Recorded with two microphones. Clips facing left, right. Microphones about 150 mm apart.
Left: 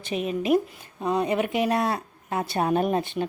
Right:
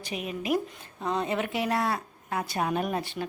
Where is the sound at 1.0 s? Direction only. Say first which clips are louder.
Left 5 dB; 15° left (ahead or behind); by 3.0 s 35° left (ahead or behind).